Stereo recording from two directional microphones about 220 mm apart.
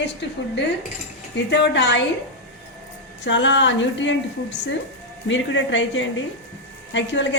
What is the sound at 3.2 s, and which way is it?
A woman's voice, 55° left (ahead or behind).